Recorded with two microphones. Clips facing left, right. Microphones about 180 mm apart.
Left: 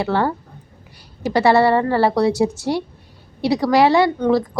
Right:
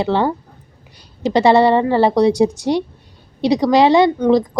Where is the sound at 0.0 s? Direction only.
20° right (ahead or behind).